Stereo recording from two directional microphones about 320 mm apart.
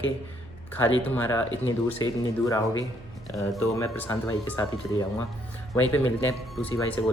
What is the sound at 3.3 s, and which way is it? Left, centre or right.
A man's voice, centre.